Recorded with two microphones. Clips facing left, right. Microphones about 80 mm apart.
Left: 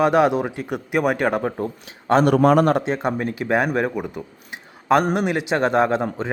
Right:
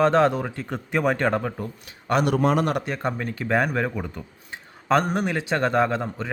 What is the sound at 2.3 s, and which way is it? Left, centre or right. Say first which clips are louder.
Speech: left 6 dB; left.